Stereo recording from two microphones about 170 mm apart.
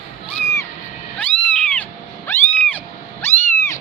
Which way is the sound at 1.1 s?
10° left (ahead or behind).